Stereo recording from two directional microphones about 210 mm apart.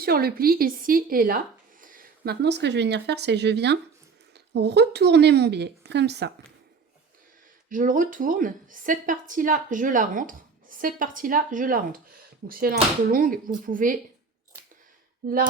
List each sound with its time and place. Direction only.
0.0 s speech: 45° right (ahead or behind)
7.7 s a woman's voice: 40° right (ahead or behind)
15.2 s speech: 45° right (ahead or behind)